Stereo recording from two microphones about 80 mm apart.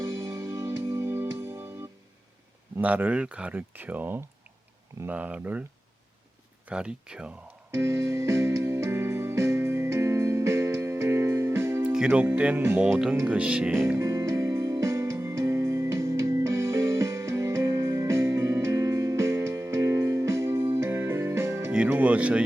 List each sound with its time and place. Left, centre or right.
0.0 s music: right
2.8 s speech: centre
6.7 s speech: centre
7.7 s music: right
11.8 s music: centre
12.4 s speech: centre
13.7 s music: right
21.8 s speech: centre